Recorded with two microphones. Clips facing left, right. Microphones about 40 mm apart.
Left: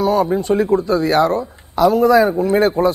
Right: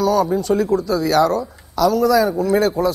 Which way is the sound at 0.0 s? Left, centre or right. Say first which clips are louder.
Left 1 dB; left.